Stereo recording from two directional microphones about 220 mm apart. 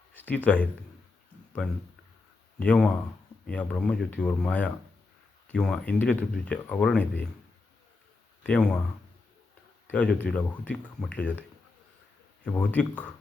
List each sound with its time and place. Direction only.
0.1 s speech: 10° left (ahead or behind)
8.4 s speech: 5° left (ahead or behind)
9.8 s speech: 5° left (ahead or behind)
12.5 s speech: 5° left (ahead or behind)